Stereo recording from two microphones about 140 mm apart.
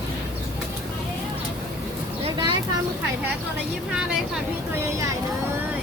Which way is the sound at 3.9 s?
5° right (ahead or behind).